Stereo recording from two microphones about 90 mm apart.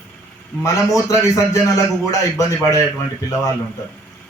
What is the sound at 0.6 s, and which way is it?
Speech, 35° left (ahead or behind).